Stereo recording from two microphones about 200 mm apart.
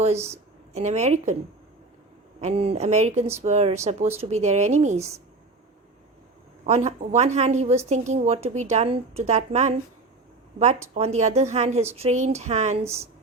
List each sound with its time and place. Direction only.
0.7 s speech: 35° right (ahead or behind)
2.4 s speech: 30° right (ahead or behind)
4.9 s a woman's voice: 15° right (ahead or behind)
6.7 s speech: 35° right (ahead or behind)
10.9 s speech: 30° right (ahead or behind)
12.8 s a woman's voice: 15° right (ahead or behind)